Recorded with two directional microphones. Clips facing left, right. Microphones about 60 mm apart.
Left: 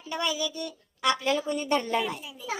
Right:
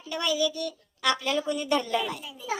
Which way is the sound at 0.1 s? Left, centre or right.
Left.